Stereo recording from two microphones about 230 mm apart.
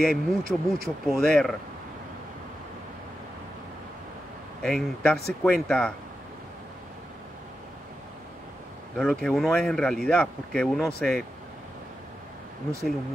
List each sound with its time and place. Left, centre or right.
0.0 s speech: centre
4.6 s speech: centre
8.9 s speech: centre